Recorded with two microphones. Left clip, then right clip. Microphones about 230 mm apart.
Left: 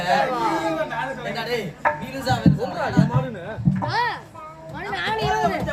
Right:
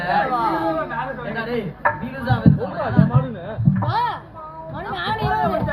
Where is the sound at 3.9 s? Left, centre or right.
Right.